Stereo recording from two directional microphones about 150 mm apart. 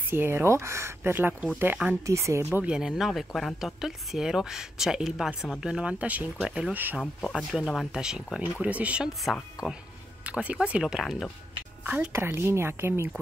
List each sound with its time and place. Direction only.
0.1 s speech: 15° right (ahead or behind)
7.0 s speech: centre (ahead or behind)
11.8 s speech: 10° right (ahead or behind)